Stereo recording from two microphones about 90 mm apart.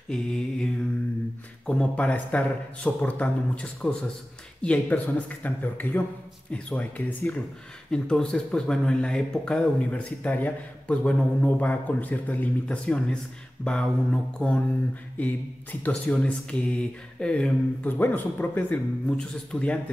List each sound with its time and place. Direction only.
0.1 s mantra: 10° left (ahead or behind)
1.7 s speech: 15° left (ahead or behind)